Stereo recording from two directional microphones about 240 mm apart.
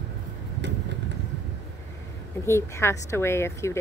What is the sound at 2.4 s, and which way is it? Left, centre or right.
A woman's voice, centre.